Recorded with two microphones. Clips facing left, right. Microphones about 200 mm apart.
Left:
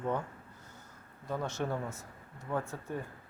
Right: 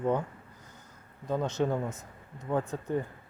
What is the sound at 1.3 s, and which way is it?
Speech, 20° right (ahead or behind).